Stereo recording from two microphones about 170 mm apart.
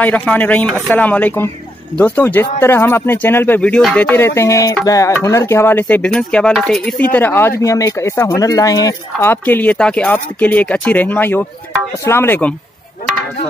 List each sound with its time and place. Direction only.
0.0 s speech: 10° left (ahead or behind)
4.4 s music: 20° left (ahead or behind)
4.8 s speech: 20° left (ahead or behind)